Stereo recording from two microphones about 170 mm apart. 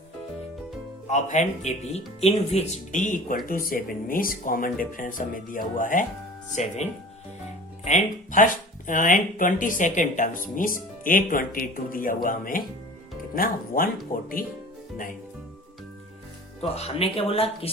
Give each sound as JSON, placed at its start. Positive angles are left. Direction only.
{"t": 1.0, "sound": "speech", "side_deg": 45}
{"t": 7.9, "sound": "speech", "side_deg": 45}
{"t": 16.6, "sound": "speech", "side_deg": 35}